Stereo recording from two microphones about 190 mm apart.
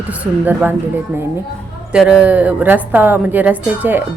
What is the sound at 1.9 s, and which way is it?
A woman's voice, 5° right (ahead or behind).